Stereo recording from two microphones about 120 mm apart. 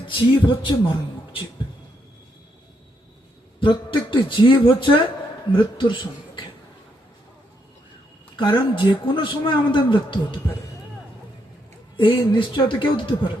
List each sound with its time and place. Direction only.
0.1 s speech: 40° left (ahead or behind)
3.6 s speech: 45° left (ahead or behind)
8.4 s speech: 40° left (ahead or behind)
11.9 s speech: 45° left (ahead or behind)